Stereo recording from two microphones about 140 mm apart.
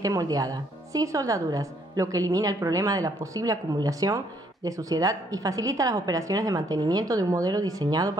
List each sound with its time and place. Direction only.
0.0 s a woman's voice: 25° right (ahead or behind)